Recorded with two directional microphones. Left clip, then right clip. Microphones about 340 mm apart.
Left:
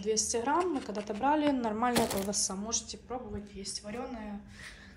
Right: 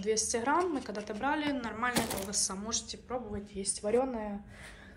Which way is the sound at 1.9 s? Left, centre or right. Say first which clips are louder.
Left 3 dB; centre.